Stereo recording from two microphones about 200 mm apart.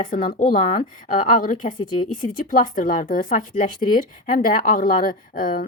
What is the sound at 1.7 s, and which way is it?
Speech, 20° left (ahead or behind).